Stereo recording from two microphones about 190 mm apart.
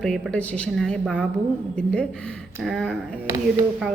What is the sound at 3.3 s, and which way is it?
Speech, 15° right (ahead or behind).